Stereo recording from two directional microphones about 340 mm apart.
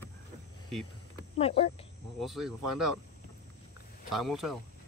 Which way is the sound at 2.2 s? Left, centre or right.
Centre.